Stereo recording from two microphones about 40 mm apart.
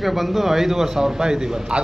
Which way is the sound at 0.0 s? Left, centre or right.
Centre.